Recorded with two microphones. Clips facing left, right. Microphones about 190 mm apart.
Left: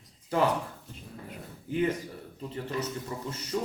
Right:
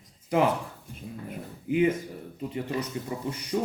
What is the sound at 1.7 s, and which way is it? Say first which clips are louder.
Speech: right 5 dB; 15° right (ahead or behind).